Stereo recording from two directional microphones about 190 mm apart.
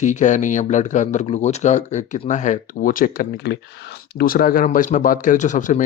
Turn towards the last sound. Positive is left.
turn(degrees=40)  # may be behind; listen again after turning